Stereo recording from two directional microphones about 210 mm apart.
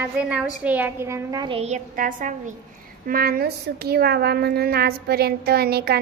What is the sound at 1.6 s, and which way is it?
A woman's voice, 35° right (ahead or behind).